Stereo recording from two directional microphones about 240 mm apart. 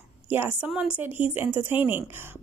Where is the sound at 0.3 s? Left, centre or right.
Centre.